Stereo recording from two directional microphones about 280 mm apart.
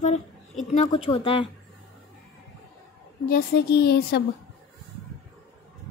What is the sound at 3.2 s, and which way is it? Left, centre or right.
Speech, left.